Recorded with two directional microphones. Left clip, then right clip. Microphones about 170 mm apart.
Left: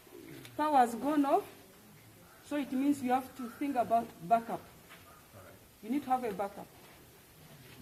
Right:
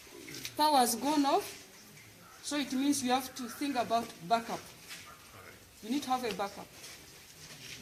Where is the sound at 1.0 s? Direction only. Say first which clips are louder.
Right 1 dB; 10° right (ahead or behind).